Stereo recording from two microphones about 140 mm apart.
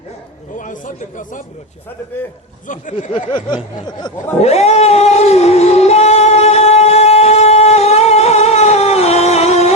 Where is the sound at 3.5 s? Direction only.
30° left (ahead or behind).